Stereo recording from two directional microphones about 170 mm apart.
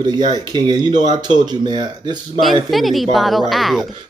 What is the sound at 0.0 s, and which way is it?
Speech, 25° right (ahead or behind).